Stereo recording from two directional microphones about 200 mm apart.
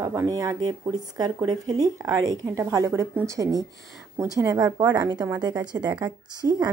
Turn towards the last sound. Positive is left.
turn(degrees=-15)  # may be behind; listen again after turning